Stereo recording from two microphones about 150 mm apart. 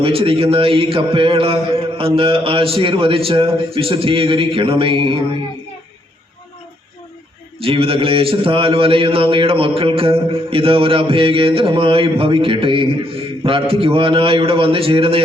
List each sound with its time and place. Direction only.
0.0 s a man's voice: 35° right (ahead or behind)
7.6 s a man's voice: 40° right (ahead or behind)